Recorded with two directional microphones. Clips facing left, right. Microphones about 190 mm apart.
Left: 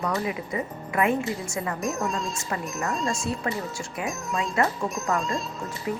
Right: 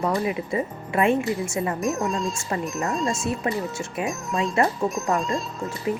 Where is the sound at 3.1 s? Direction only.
25° right (ahead or behind).